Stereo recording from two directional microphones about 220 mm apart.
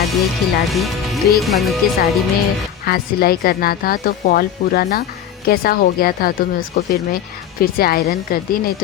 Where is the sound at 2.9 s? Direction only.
45° left (ahead or behind).